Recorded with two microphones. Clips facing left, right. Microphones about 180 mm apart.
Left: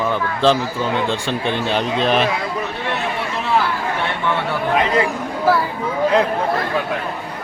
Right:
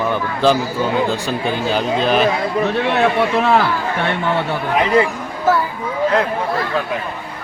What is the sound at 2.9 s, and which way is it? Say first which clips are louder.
Speech: right 8 dB; 60° right (ahead or behind).